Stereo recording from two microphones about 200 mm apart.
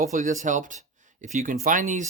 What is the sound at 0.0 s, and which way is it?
Speech, 40° right (ahead or behind).